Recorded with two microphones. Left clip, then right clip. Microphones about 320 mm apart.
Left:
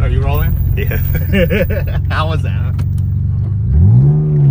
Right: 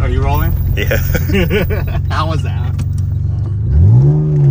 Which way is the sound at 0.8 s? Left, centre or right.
Right.